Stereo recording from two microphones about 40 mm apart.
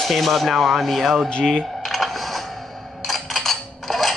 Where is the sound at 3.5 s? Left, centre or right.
Centre.